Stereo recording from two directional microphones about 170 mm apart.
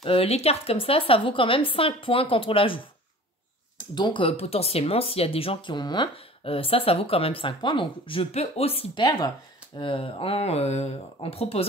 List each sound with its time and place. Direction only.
0.0 s speech: 35° left (ahead or behind)
3.9 s speech: 25° left (ahead or behind)